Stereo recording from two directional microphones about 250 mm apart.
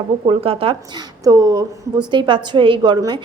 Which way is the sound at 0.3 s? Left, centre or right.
Right.